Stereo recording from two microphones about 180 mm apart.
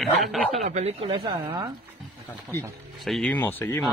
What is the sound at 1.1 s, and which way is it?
Speech, 25° right (ahead or behind).